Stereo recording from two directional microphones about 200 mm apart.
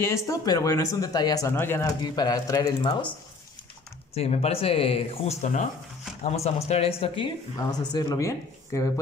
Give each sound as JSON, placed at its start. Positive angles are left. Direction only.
{"t": 0.0, "sound": "speech", "side_deg": 15}
{"t": 4.1, "sound": "speech", "side_deg": 30}
{"t": 7.5, "sound": "speech", "side_deg": 20}